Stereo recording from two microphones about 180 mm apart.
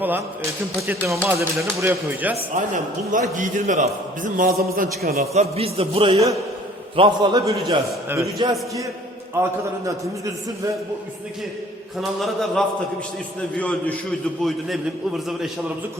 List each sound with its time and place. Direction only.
0.9 s speech: 15° right (ahead or behind)
2.7 s a man's voice: 45° right (ahead or behind)
5.3 s a man's voice: 35° right (ahead or behind); by 10.3 s 20° right (ahead or behind)
11.9 s a man's voice: centre (ahead or behind)